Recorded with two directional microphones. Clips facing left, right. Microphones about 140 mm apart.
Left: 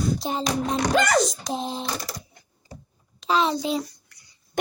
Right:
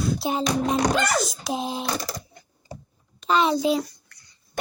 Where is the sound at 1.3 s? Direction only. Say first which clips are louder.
Right 1 dB; 10° right (ahead or behind).